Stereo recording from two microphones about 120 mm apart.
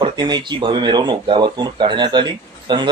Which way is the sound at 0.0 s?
35° right (ahead or behind).